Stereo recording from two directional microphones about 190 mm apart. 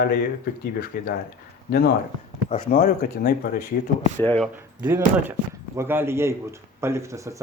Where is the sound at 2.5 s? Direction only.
45° left (ahead or behind).